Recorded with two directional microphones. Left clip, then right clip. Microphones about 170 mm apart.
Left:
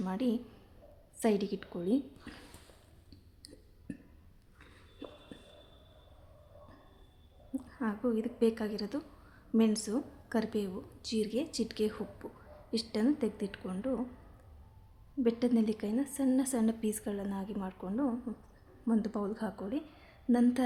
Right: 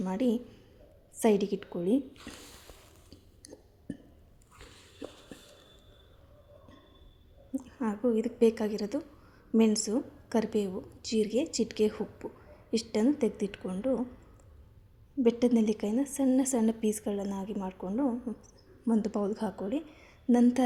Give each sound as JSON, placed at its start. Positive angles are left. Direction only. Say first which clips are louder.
{"t": 0.0, "sound": "a woman's voice", "louder": "right 4 dB", "side_deg": -10}
{"t": 3.1, "sound": "a sound", "louder": "right 3 dB", "side_deg": -10}
{"t": 7.5, "sound": "a woman's voice", "louder": "right 3 dB", "side_deg": -10}
{"t": 15.2, "sound": "a woman's voice", "louder": "right 4 dB", "side_deg": -20}